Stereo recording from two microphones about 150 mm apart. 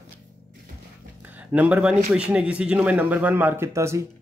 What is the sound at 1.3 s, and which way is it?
A man's voice, 10° right (ahead or behind).